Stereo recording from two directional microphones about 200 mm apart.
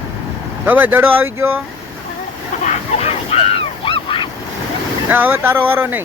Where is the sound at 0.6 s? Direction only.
10° right (ahead or behind).